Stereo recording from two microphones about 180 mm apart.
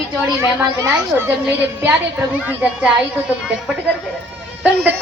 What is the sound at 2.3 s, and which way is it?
Speech, 5° right (ahead or behind).